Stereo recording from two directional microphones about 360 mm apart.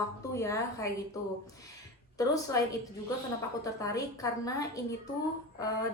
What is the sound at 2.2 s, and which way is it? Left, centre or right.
Speech, centre.